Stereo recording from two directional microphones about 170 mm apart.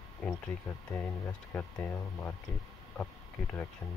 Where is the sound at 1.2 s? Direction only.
5° left (ahead or behind).